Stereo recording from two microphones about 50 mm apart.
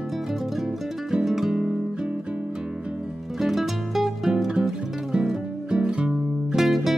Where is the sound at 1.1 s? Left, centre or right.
Centre.